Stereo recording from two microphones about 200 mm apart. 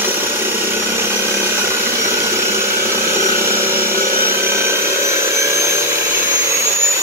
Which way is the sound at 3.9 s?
45° right (ahead or behind).